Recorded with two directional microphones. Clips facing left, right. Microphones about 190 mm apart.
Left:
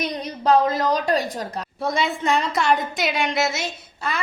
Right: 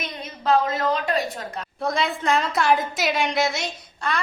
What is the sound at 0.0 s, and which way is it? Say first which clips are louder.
A woman's voice: left 5 dB; 40° left (ahead or behind).